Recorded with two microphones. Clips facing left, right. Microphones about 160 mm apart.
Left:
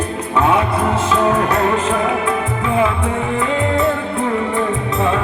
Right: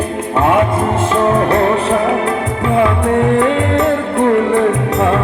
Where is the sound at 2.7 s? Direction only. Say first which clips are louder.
Right 5 dB; 65° right (ahead or behind).